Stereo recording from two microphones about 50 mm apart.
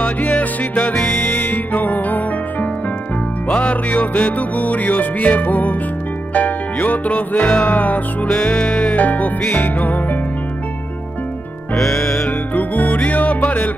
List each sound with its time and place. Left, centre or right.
0.0 s music: left
0.9 s music: centre
1.5 s music: left
8.3 s music: centre
8.9 s music: left
11.7 s music: centre
12.5 s music: left